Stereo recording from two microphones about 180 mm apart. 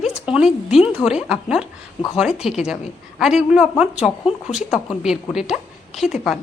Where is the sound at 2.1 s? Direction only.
5° right (ahead or behind).